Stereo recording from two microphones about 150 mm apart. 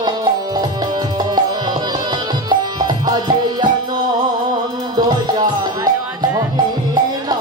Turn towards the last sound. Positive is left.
turn(degrees=-30)  # may be behind; listen again after turning